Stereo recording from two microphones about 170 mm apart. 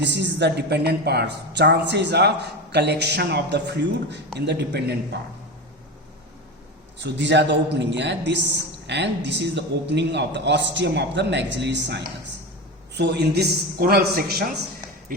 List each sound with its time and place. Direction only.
0.0 s a woman's voice: 90° right
7.0 s a man's voice: 90° right; by 14.4 s 65° right (ahead or behind)